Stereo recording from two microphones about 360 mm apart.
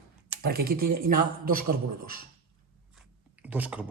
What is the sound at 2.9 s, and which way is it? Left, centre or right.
Chewing, centre.